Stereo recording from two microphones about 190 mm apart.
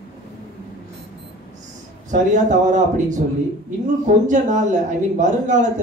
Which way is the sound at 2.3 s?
40° right (ahead or behind).